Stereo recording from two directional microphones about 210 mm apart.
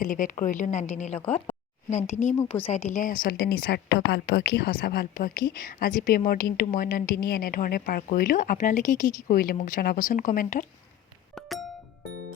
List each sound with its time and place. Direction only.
0.0 s a woman's voice: 40° left (ahead or behind)
11.3 s chink: centre (ahead or behind)